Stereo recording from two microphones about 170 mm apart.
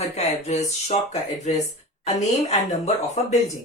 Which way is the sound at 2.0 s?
40° left (ahead or behind).